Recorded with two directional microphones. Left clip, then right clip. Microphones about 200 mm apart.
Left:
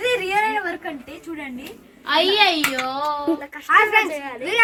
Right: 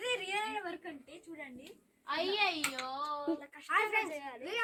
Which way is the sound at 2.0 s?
60° left (ahead or behind).